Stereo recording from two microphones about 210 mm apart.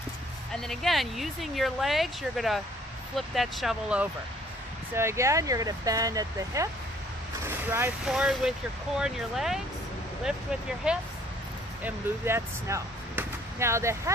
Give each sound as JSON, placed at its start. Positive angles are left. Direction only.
{"t": 0.5, "sound": "speech", "side_deg": 0}